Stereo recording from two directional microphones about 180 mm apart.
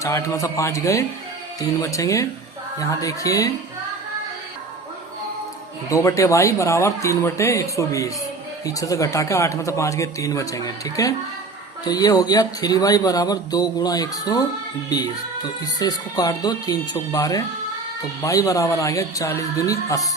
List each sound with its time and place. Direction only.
0.0 s speech: 15° left (ahead or behind)
5.9 s speech: 15° left (ahead or behind)